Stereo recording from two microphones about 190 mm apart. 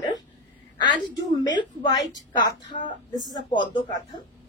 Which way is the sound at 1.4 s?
20° left (ahead or behind).